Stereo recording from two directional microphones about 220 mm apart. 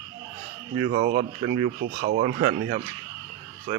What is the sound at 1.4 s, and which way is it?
Speech, 25° right (ahead or behind).